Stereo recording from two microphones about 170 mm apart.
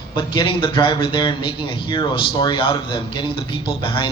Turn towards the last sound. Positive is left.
turn(degrees=30)  # may be behind; listen again after turning